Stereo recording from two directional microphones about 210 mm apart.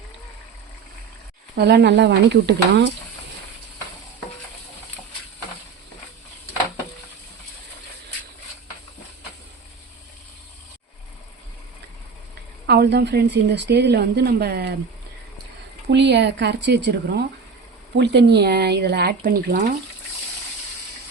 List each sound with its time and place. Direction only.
1.5 s speech: 50° right (ahead or behind)
12.6 s a woman's voice: 50° right (ahead or behind)
15.9 s a woman's voice: 55° right (ahead or behind)